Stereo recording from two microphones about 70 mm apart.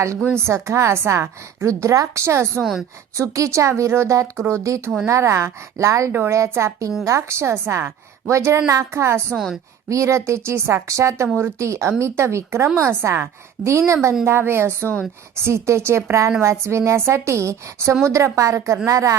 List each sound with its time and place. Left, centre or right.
0.3 s a woman's voice: right
12.6 s a woman's voice: right
13.7 s a woman's voice: right